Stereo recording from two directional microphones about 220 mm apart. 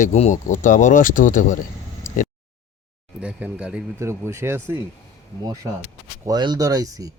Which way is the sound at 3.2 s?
5° right (ahead or behind).